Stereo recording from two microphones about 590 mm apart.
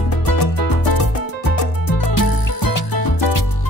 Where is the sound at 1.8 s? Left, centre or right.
Left.